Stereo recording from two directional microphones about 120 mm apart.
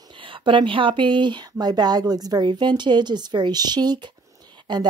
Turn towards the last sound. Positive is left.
turn(degrees=-40)  # may be behind; listen again after turning